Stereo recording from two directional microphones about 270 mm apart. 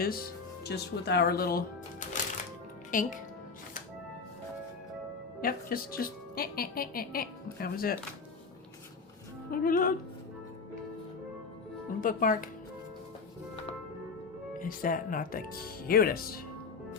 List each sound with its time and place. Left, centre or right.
0.0 s speech: left
5.4 s speech: left
9.5 s speech: left
11.9 s speech: left
14.6 s speech: left